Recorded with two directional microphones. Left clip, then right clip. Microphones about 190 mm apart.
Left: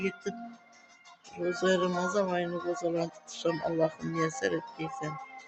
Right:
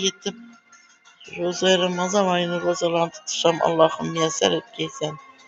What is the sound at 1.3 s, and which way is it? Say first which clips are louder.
Speech: right 8 dB; 15° left (ahead or behind).